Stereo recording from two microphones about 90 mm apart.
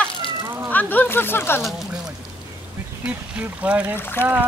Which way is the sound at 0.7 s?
20° left (ahead or behind).